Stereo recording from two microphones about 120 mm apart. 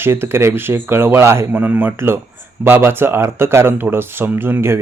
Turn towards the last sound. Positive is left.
turn(degrees=-20)  # may be behind; listen again after turning